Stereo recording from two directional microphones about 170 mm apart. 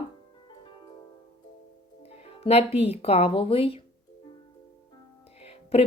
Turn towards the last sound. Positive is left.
turn(degrees=35)  # may be behind; listen again after turning